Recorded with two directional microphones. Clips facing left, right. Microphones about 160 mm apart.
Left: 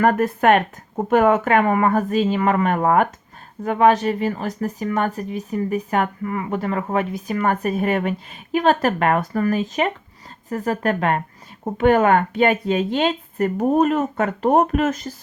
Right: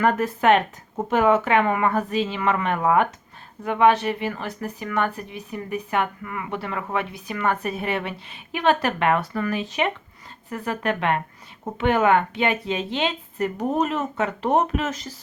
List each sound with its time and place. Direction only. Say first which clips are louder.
0.0 s speech: left 3 dB; 50° left (ahead or behind)